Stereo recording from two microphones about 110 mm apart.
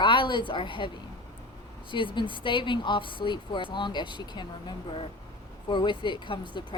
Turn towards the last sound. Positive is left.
turn(degrees=50)  # may be behind; listen again after turning